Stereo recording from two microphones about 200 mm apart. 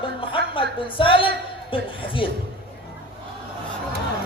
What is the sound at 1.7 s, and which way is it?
Speech, 25° left (ahead or behind).